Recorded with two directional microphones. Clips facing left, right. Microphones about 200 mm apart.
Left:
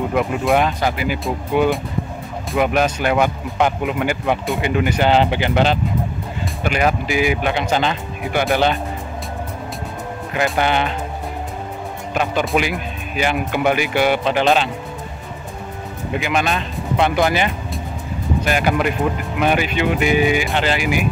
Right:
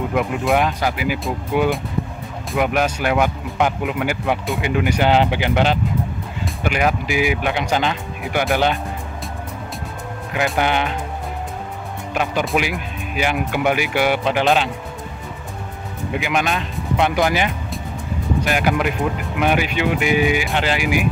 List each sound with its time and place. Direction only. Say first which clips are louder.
0.1 s speech: left 1 dB; 5° right (ahead or behind)
10.3 s speech: left 1 dB; centre (ahead or behind)
12.1 s speech: left 1 dB; 5° right (ahead or behind)
16.2 s speech: left 1 dB; 10° right (ahead or behind)